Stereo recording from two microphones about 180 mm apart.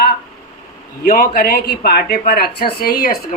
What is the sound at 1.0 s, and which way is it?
Speech, 50° left (ahead or behind).